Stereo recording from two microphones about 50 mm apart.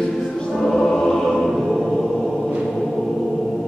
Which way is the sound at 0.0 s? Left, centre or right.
Centre.